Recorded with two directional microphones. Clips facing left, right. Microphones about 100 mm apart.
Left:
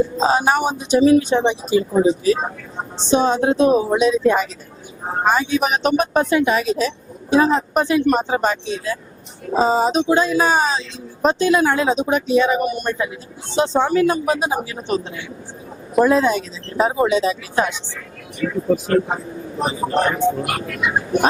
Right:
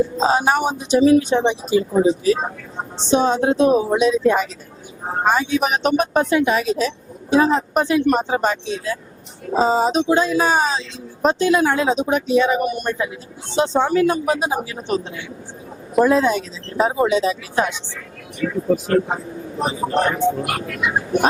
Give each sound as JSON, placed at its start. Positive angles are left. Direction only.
{"t": 0.2, "sound": "speech", "side_deg": 20}